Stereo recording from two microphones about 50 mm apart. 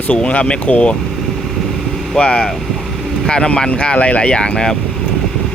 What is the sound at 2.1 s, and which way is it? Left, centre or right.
Speech, centre.